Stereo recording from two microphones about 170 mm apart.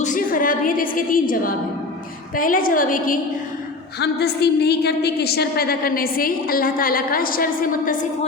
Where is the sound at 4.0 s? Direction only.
70° left (ahead or behind); by 8.0 s 55° left (ahead or behind).